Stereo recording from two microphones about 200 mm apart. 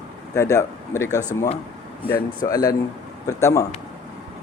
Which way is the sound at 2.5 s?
20° left (ahead or behind).